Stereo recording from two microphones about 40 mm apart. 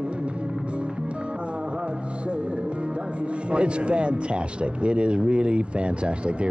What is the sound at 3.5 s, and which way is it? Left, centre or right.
Speech, right.